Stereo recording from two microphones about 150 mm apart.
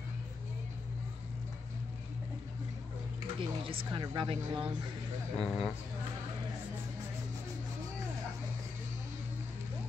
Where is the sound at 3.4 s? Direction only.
35° right (ahead or behind).